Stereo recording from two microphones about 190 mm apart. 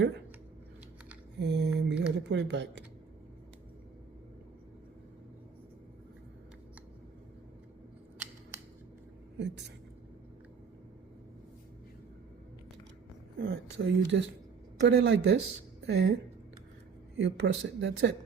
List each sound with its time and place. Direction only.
1.4 s a sound: 65° right (ahead or behind)
2.3 s speech: 65° right (ahead or behind)
9.4 s speech: 65° right (ahead or behind)
13.4 s speech: 80° right; by 16.1 s 60° right (ahead or behind)
17.2 s speech: 70° right (ahead or behind)